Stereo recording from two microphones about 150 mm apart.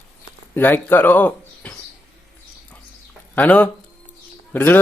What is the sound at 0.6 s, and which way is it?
Speech, 15° left (ahead or behind).